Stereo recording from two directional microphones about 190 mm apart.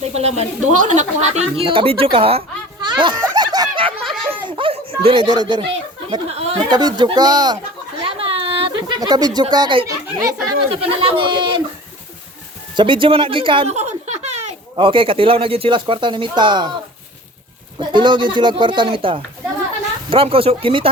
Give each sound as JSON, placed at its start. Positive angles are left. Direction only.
{"t": 0.0, "sound": "a woman's voice", "side_deg": -35}
{"t": 2.8, "sound": "a sound", "side_deg": -25}
{"t": 6.7, "sound": "speech", "side_deg": -20}
{"t": 8.0, "sound": "a sound", "side_deg": -30}
{"t": 10.6, "sound": "speech", "side_deg": -25}
{"t": 12.7, "sound": "speech", "side_deg": -25}
{"t": 17.7, "sound": "speech", "side_deg": -25}